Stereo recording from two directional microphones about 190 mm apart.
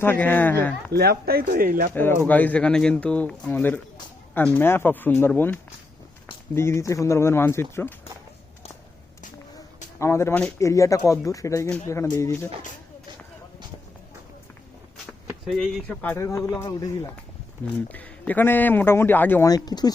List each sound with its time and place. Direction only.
0.0 s a man's voice: 10° left (ahead or behind)
0.9 s speech: 55° right (ahead or behind)
1.9 s a man's voice: 10° left (ahead or behind)
10.0 s a man's voice: 15° left (ahead or behind)
15.4 s a man's voice: centre (ahead or behind); by 17.2 s 20° left (ahead or behind)
17.8 s a man's voice: 10° left (ahead or behind)